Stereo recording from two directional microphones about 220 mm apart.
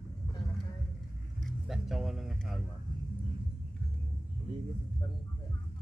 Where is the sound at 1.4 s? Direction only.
Centre (ahead or behind).